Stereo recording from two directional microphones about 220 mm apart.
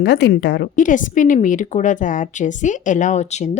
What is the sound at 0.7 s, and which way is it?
A woman's voice, 35° left (ahead or behind).